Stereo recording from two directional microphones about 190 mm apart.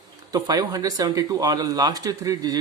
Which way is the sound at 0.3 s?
20° right (ahead or behind).